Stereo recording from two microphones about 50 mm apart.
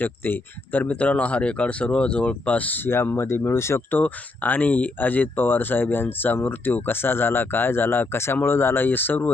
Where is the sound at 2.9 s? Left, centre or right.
Left.